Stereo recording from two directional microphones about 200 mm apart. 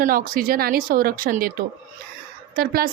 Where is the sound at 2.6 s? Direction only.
50° right (ahead or behind).